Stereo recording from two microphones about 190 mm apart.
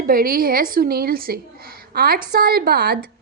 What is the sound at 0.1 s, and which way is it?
A woman's voice, 50° right (ahead or behind).